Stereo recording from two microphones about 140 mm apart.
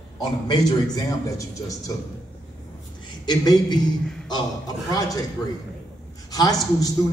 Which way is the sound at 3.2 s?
30° left (ahead or behind).